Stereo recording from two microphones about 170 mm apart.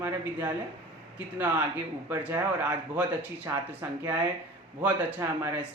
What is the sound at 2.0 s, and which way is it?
Speech, 15° right (ahead or behind).